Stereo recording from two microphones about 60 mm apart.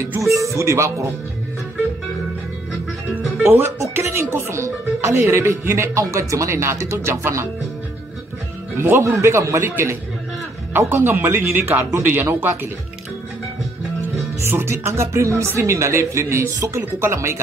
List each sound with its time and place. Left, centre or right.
0.2 s speech: right
3.9 s speech: right
8.7 s speech: right
9.7 s speech: right
11.5 s speech: right
14.4 s speech: right
16.5 s speech: right
17.0 s speech: right